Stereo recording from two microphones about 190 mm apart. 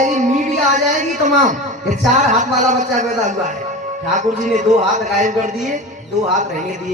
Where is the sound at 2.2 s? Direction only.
40° right (ahead or behind).